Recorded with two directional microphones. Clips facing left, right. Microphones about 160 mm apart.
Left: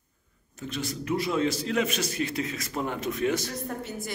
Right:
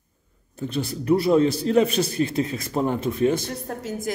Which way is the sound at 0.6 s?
35° right (ahead or behind).